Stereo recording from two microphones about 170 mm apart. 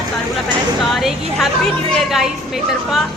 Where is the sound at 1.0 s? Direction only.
Centre (ahead or behind).